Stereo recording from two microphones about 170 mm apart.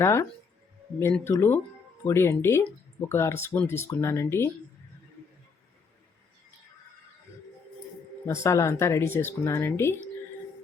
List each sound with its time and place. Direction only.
0.0 s speech: 15° left (ahead or behind)
8.3 s speech: 15° left (ahead or behind)